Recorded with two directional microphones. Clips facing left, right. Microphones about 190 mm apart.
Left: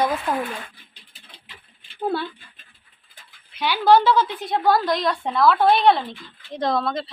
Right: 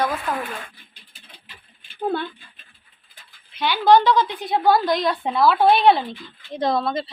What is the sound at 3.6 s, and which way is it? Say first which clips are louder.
A woman's voice: right 1 dB; 10° left (ahead or behind).